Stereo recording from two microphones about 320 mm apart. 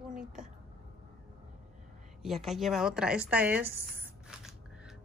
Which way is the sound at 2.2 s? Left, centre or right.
Centre.